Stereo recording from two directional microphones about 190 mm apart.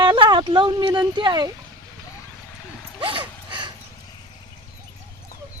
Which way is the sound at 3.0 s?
25° right (ahead or behind).